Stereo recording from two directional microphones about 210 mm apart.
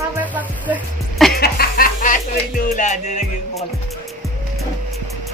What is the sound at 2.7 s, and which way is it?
Music, 35° left (ahead or behind).